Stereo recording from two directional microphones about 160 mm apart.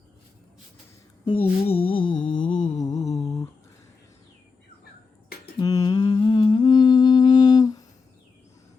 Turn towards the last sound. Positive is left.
turn(degrees=25)  # may be behind; listen again after turning